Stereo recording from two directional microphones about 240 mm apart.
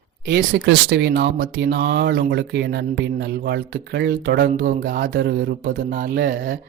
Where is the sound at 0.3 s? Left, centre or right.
Right.